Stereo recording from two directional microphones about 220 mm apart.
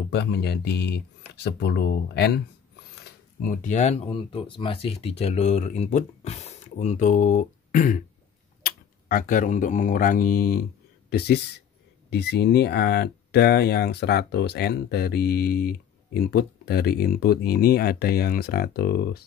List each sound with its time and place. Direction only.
0.1 s speech: 50° left (ahead or behind)
3.3 s speech: 35° left (ahead or behind)